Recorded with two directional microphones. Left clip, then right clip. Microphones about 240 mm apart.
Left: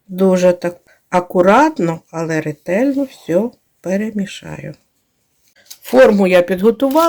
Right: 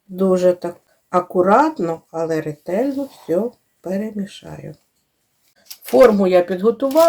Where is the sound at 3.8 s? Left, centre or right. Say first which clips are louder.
Left 5 dB; left.